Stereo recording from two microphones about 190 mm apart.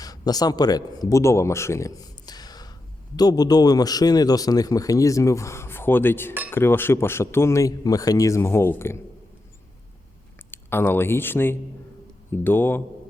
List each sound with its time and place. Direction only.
0.0 s speech: 20° left (ahead or behind)
10.5 s speech: 10° left (ahead or behind)